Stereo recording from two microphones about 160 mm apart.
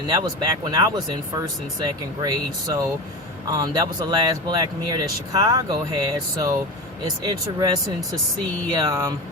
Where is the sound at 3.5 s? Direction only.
25° right (ahead or behind).